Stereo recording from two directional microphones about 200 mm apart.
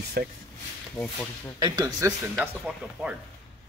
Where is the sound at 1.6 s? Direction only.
20° right (ahead or behind).